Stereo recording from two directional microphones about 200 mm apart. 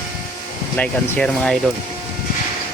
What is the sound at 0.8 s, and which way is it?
Speech, 5° left (ahead or behind).